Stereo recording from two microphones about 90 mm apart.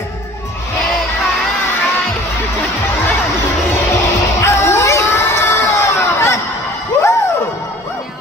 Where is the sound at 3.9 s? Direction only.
35° left (ahead or behind).